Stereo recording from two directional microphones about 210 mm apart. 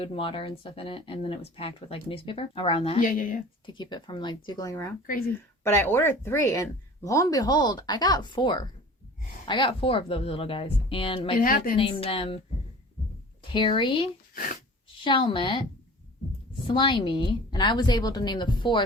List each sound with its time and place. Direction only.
0.0 s speech: 25° left (ahead or behind)
3.0 s speech: 40° left (ahead or behind)
3.7 s speech: 20° left (ahead or behind)
11.3 s a woman's voice: 40° left (ahead or behind)
11.8 s speech: 25° left (ahead or behind)
13.5 s speech: 25° left (ahead or behind)
14.3 s speech: 40° left (ahead or behind)
15.0 s speech: 25° left (ahead or behind)
16.7 s speech: 25° left (ahead or behind)